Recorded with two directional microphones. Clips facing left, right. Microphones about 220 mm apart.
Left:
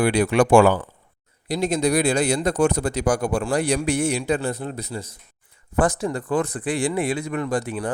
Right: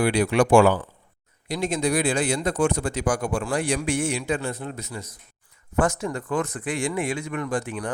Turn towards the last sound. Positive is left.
turn(degrees=35)  # may be behind; listen again after turning